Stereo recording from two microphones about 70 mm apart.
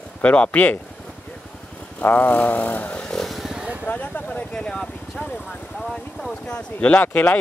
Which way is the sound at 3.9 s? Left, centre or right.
Left.